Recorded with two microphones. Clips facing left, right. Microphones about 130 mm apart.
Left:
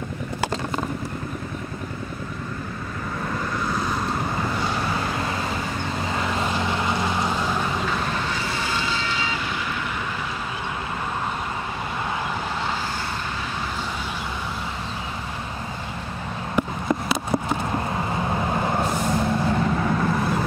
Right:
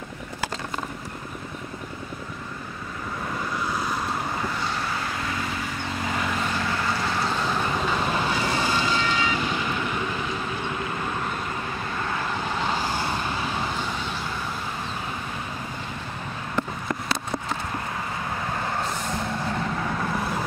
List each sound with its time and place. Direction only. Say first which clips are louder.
3.7 s vehicle: left 2 dB; 5° right (ahead or behind)
6.3 s boat: left 3 dB; 20° left (ahead or behind)
16.6 s a sound: left 5 dB; 15° left (ahead or behind)
18.2 s vehicle: left 6 dB; 25° left (ahead or behind)